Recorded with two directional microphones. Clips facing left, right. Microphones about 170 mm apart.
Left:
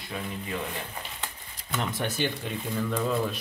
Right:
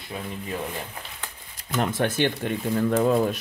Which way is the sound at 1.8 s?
55° right (ahead or behind).